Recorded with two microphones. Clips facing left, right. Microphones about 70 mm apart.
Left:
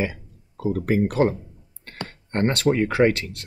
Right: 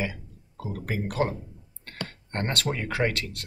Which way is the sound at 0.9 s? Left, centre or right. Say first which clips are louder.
Left 6 dB; left.